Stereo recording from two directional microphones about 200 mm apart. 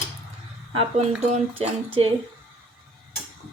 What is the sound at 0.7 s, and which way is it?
Speech, 30° right (ahead or behind).